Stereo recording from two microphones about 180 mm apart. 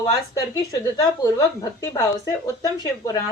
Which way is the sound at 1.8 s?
20° left (ahead or behind).